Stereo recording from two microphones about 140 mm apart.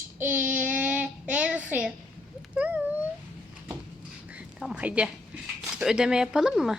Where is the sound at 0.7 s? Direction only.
10° right (ahead or behind).